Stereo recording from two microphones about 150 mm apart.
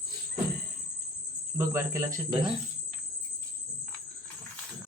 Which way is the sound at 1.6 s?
20° right (ahead or behind).